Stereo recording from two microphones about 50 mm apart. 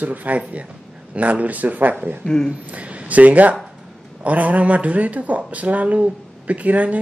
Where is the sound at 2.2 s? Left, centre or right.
Centre.